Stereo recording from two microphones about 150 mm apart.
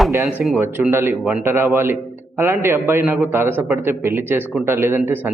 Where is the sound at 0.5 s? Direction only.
10° right (ahead or behind).